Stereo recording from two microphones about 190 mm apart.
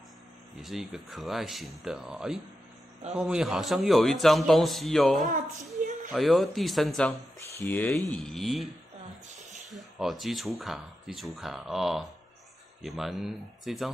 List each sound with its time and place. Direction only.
0.6 s speech: centre (ahead or behind)
5.2 s a woman's voice: 40° right (ahead or behind)
6.1 s speech: centre (ahead or behind)
9.7 s speech: centre (ahead or behind)